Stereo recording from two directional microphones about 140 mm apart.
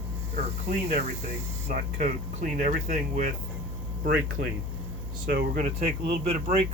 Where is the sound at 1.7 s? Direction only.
70° right (ahead or behind).